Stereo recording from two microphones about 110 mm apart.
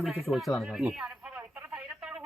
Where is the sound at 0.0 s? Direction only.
Centre (ahead or behind); by 2.0 s 20° right (ahead or behind).